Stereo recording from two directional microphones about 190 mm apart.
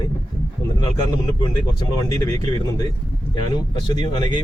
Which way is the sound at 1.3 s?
25° left (ahead or behind).